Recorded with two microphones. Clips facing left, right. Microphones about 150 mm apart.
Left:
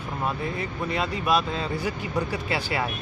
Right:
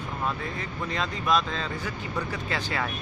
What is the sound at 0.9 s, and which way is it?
Speech, 10° left (ahead or behind).